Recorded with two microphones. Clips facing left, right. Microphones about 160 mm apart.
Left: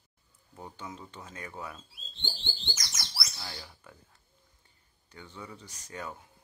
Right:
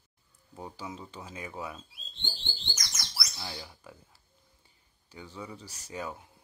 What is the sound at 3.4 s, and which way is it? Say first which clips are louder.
Speech: right 3 dB; 20° right (ahead or behind).